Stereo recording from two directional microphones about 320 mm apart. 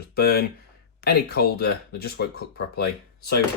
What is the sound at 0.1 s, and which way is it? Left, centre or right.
Speech, left.